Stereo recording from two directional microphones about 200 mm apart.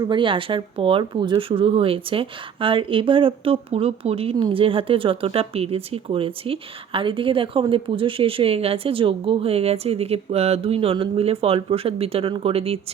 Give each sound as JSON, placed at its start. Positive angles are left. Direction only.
{"t": 0.0, "sound": "speech", "side_deg": -25}